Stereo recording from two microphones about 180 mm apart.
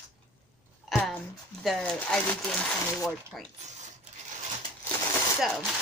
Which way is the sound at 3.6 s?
40° right (ahead or behind).